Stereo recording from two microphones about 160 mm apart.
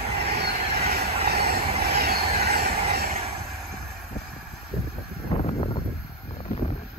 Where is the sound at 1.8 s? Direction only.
80° right.